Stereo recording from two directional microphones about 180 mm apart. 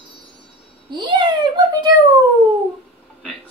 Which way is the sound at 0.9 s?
25° right (ahead or behind).